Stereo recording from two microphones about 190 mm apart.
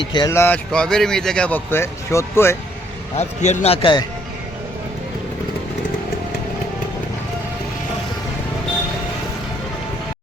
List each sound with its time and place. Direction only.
0.0 s speech: 25° left (ahead or behind)
3.2 s a man's voice: 35° left (ahead or behind)